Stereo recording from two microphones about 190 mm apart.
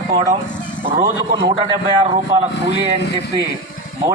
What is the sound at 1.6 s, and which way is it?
Speech, 30° right (ahead or behind).